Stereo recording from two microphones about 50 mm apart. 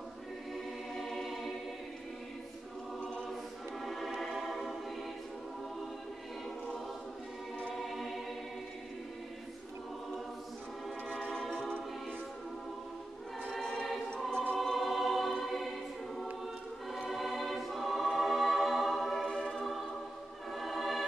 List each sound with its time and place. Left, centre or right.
0.9 s choir: centre
3.8 s music: centre
7.7 s choir: centre
11.1 s choir: centre
13.6 s choir: centre
16.9 s choir: centre
19.4 s music: centre